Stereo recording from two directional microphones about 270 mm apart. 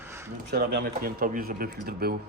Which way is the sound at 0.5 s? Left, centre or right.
Right.